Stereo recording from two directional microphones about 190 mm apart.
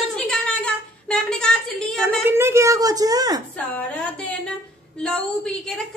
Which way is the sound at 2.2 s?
15° right (ahead or behind).